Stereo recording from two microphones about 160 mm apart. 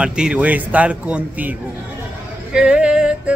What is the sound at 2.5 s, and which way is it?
Music, 5° right (ahead or behind).